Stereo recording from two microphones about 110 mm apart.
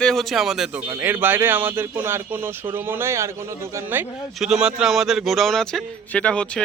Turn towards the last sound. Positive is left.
turn(degrees=10)  # may be behind; listen again after turning